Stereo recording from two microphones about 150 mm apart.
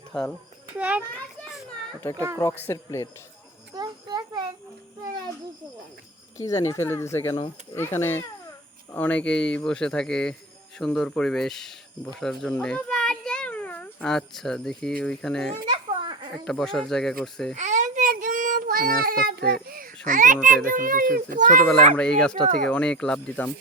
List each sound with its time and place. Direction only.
0.1 s a child's voice: 5° left (ahead or behind)
0.8 s a child's voice: 10° right (ahead or behind)
2.1 s speech: 20° right (ahead or behind)
2.4 s speech: 15° left (ahead or behind)
3.8 s child singing: 30° right (ahead or behind)
6.3 s a child's voice: 20° left (ahead or behind); by 15.5 s 5° left (ahead or behind)
15.6 s children playing: 35° right (ahead or behind)
16.5 s speech: centre (ahead or behind)
17.5 s child singing: 55° right (ahead or behind); by 18.9 s 75° right (ahead or behind)
19.0 s a child's voice: 85° right; by 21.5 s 65° right (ahead or behind)
21.9 s speech: 5° left (ahead or behind)